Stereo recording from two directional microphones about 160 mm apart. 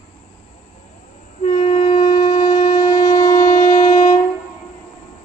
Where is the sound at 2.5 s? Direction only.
45° left (ahead or behind).